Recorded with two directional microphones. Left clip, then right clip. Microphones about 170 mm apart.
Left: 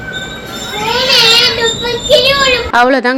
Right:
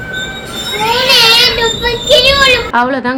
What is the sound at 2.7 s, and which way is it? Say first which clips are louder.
Speech: left 3 dB; 20° left (ahead or behind).